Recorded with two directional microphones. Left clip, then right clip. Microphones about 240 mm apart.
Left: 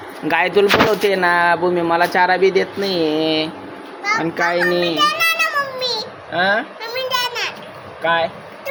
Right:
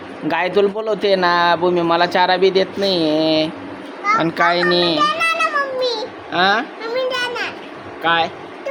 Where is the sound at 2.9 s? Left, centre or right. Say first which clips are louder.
Right 1 dB; right.